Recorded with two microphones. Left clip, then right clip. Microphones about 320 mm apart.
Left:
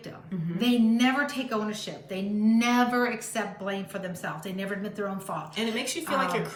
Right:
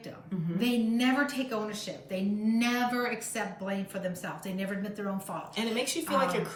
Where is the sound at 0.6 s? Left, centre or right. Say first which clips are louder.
Left 5 dB; centre.